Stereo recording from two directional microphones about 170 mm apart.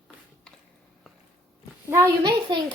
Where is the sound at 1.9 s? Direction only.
15° right (ahead or behind).